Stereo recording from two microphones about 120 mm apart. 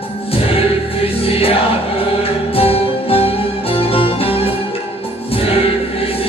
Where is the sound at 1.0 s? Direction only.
50° left (ahead or behind).